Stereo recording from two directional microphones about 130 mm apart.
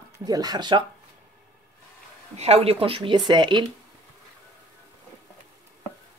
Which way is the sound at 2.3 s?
55° right (ahead or behind).